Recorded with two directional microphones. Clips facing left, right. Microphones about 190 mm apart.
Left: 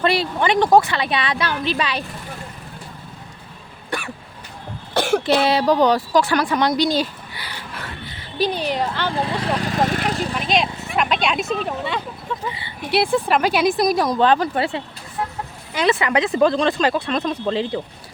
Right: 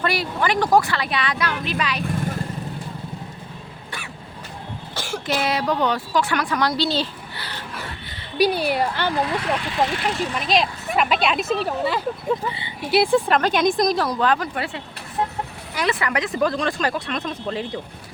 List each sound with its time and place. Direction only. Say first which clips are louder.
0.0 s speech: left 4 dB; 25° left (ahead or behind)
4.9 s cough: left 12 dB; 65° left (ahead or behind)
5.5 s speech: left 4 dB; 35° left (ahead or behind); by 7.6 s 10° left (ahead or behind)
8.4 s a woman's voice: right 2 dB; 10° right (ahead or behind)
9.1 s speech: even; 30° left (ahead or behind)
10.3 s speech: even; centre (ahead or behind)
14.2 s speech: left 5 dB; 30° left (ahead or behind)